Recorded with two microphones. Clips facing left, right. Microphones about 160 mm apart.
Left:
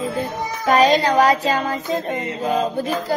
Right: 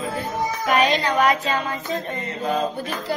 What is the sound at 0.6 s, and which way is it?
Child singing, 40° left (ahead or behind).